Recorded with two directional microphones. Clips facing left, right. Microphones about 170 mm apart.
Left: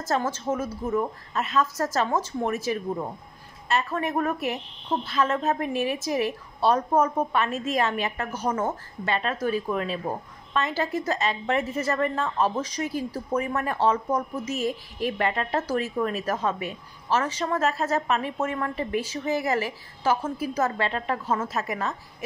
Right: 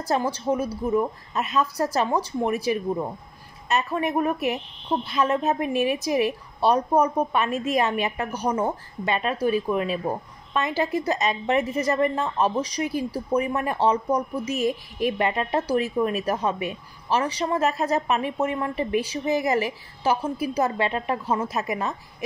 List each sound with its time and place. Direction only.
0.0 s a woman's voice: 15° right (ahead or behind)